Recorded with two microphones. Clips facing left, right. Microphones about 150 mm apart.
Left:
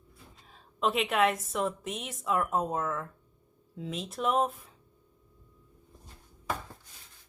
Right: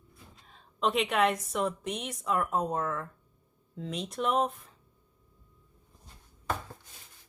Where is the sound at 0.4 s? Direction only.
Centre (ahead or behind).